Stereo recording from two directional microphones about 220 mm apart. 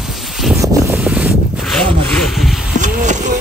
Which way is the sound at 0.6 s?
15° right (ahead or behind).